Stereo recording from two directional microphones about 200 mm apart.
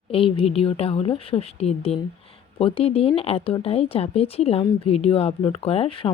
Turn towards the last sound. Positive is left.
turn(degrees=25)  # may be behind; listen again after turning